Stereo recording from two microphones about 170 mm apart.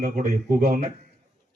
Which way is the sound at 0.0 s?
60° right (ahead or behind).